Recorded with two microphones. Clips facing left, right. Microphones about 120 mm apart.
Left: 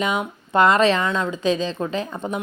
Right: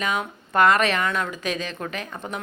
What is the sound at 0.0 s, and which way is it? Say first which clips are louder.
Speech: left 3 dB; 20° left (ahead or behind).